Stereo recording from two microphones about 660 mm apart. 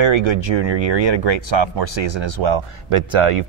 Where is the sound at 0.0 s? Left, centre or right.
Right.